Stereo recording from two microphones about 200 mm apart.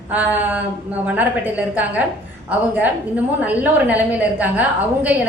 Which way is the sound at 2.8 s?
10° right (ahead or behind).